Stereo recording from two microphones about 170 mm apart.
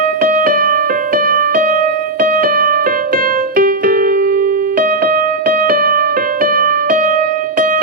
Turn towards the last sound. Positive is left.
turn(degrees=-50)  # may be behind; listen again after turning